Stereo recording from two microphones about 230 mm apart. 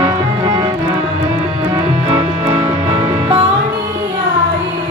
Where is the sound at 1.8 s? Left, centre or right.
Centre.